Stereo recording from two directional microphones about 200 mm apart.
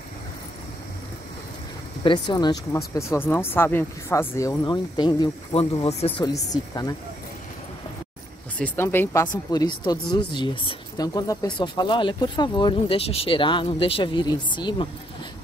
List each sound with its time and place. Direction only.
2.0 s speech: 20° left (ahead or behind)
8.5 s speech: 10° left (ahead or behind)